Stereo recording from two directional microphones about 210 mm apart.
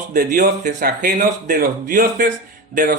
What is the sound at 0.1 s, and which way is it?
Speech, 45° right (ahead or behind).